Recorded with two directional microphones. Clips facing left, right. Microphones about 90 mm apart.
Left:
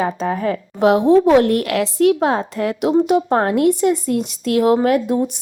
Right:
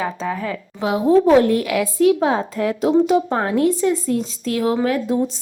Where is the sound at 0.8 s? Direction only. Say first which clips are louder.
Left 3 dB; 70° left (ahead or behind).